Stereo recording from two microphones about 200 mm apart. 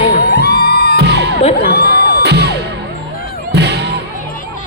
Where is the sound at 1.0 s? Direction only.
55° right (ahead or behind).